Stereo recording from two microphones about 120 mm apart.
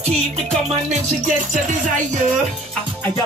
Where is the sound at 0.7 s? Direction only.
80° right.